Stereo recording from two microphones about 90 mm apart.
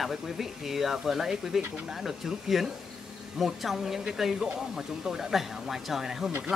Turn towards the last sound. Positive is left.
turn(degrees=-15)  # may be behind; listen again after turning